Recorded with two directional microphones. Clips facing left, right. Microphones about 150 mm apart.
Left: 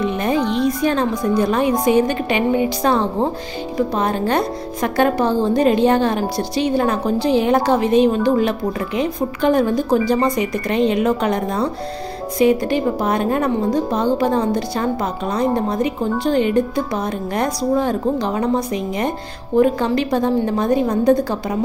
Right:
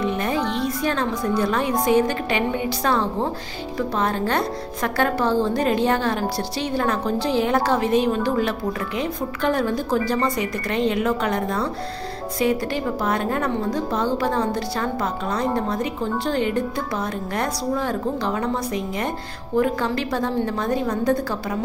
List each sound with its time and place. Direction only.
0.0 s a woman's voice: 20° left (ahead or behind)